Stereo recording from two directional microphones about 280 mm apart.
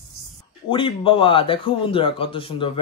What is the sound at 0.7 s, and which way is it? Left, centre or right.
A man's voice, centre.